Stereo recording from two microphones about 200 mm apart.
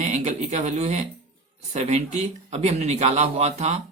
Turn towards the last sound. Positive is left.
turn(degrees=-30)  # may be behind; listen again after turning